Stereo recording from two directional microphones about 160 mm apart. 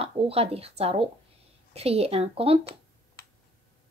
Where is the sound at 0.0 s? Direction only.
40° right (ahead or behind).